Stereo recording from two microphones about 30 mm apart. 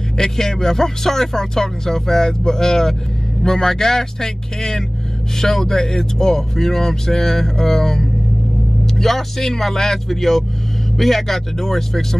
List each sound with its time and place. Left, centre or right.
0.2 s speech: centre